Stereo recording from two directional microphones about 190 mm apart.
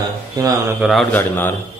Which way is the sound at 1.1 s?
10° left (ahead or behind).